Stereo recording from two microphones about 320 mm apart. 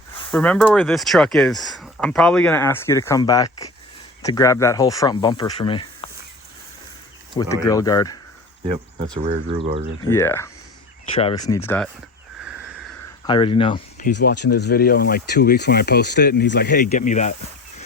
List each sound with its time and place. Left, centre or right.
0.3 s speech: centre
6.0 s a sound: centre
7.3 s speech: centre
9.1 s speech: centre
10.1 s speech: centre
13.2 s speech: centre
14.5 s speech: left